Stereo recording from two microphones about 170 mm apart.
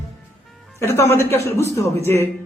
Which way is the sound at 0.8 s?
15° left (ahead or behind).